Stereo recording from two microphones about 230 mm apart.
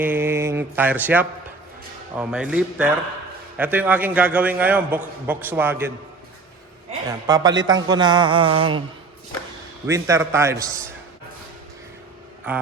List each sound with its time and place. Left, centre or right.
0.0 s a man's voice: centre
7.3 s a man's voice: centre
9.8 s a man's voice: centre
12.5 s a man's voice: centre